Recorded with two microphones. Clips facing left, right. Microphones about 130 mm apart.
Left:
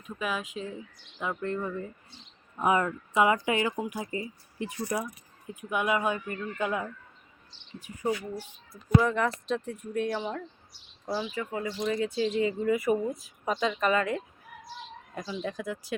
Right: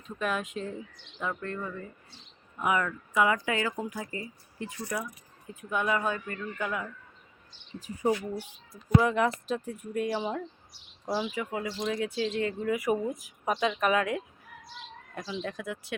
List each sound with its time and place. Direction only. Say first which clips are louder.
0.2 s speech: right 2 dB; centre (ahead or behind)
1.2 s speech: left 3 dB; 15° left (ahead or behind)
8.4 s speech: right 1 dB; 10° right (ahead or behind)
12.7 s speech: left 2 dB; 10° right (ahead or behind)
15.1 s speech: left 1 dB; 5° left (ahead or behind)